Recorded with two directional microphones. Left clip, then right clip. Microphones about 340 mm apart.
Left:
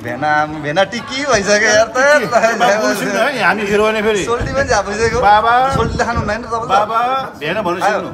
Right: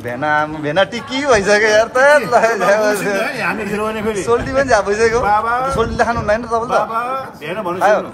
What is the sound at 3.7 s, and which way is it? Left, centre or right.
Speech, left.